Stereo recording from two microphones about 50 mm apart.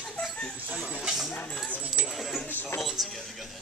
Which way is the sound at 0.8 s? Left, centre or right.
Centre.